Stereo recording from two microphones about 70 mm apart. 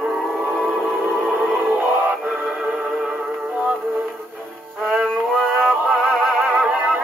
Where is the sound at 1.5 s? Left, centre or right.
Right.